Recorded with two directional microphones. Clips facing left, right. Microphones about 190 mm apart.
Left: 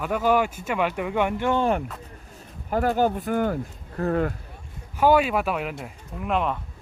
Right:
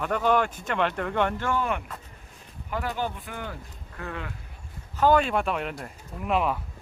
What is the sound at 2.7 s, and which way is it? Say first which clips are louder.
Speech: left 8 dB; 45° left (ahead or behind).